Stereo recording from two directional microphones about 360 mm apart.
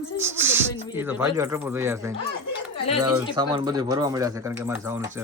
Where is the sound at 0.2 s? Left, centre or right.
Centre.